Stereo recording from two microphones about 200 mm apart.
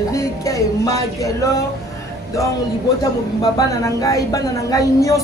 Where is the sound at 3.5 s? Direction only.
15° left (ahead or behind).